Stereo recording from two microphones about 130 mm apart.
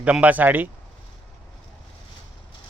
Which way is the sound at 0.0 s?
10° right (ahead or behind).